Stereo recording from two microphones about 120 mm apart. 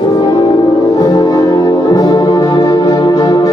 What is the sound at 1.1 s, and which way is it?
Music, 30° left (ahead or behind).